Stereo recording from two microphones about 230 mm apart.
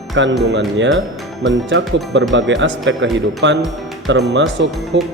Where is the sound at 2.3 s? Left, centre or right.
Right.